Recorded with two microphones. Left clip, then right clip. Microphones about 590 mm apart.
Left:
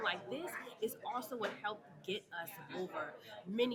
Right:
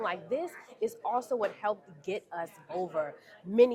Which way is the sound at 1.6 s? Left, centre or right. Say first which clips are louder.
Right 9 dB; right.